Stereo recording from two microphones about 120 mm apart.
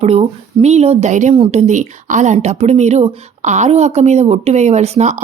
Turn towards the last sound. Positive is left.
turn(degrees=-65)  # may be behind; listen again after turning